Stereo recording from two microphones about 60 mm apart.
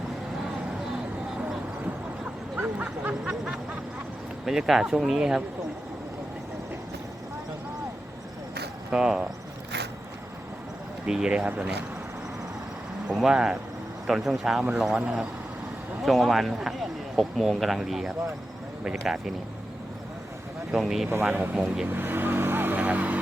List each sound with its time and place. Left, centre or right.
2.6 s a sound: right
4.4 s speech: centre
8.9 s speech: centre
11.0 s speech: centre
11.4 s speech: right
13.1 s speech: centre
16.0 s speech: centre
20.7 s speech: centre
21.2 s speech: right
21.5 s speech: centre
21.8 s vehicle: right